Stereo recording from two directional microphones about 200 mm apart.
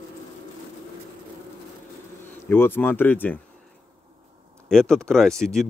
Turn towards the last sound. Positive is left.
turn(degrees=0)  # may be behind; listen again after turning